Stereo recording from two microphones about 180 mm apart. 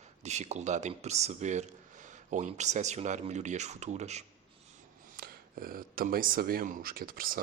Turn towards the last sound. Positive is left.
turn(degrees=-50)  # may be behind; listen again after turning